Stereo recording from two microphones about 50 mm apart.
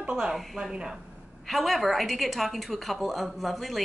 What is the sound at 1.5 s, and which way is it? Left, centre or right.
A woman's voice, centre.